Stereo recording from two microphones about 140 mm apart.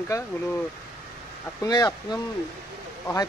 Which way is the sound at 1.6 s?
25° left (ahead or behind).